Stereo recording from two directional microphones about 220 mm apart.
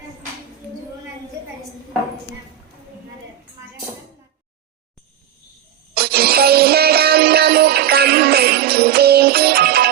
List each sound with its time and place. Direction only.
5.9 s music: 45° right (ahead or behind)